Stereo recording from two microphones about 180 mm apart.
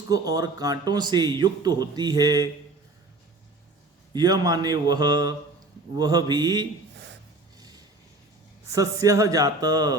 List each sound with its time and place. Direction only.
0.1 s speech: 20° right (ahead or behind)
4.1 s speech: 20° right (ahead or behind)
8.7 s speech: 20° right (ahead or behind)